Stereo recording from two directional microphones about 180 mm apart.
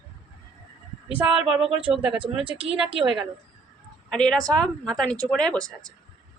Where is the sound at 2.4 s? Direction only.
30° right (ahead or behind).